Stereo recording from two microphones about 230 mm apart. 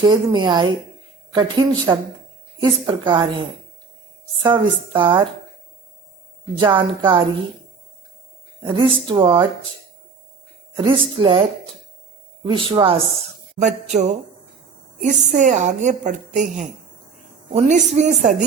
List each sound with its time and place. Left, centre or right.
0.0 s speech: centre
4.4 s speech: centre
6.6 s speech: right
8.6 s speech: right
10.8 s speech: right
12.5 s a woman's voice: right